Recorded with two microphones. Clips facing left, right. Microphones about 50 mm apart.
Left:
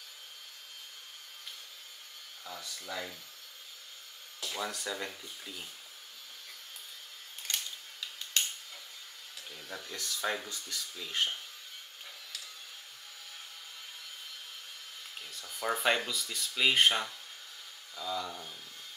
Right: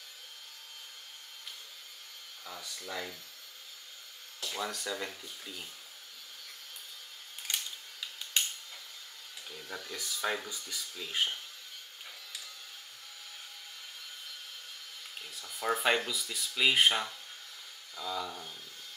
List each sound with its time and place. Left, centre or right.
2.4 s speech: centre
2.9 s speech: centre
4.4 s speech: centre
7.5 s camera: centre
8.3 s a sound: centre
9.5 s speech: centre
15.4 s speech: centre